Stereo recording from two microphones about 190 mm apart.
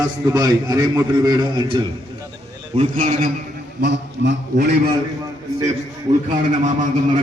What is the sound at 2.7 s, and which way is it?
Speech, 40° right (ahead or behind).